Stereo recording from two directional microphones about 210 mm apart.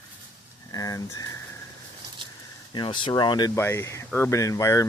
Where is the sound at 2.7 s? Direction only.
20° left (ahead or behind).